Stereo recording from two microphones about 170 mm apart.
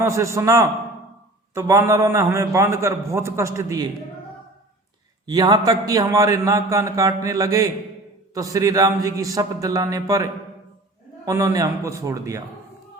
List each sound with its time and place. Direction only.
0.1 s a man's voice: 15° right (ahead or behind)
5.2 s a man's voice: 25° right (ahead or behind)
11.3 s a man's voice: 20° right (ahead or behind)